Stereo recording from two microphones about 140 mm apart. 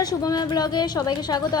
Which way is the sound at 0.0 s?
25° left (ahead or behind).